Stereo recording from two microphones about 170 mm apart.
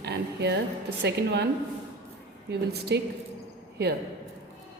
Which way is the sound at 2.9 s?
90° right.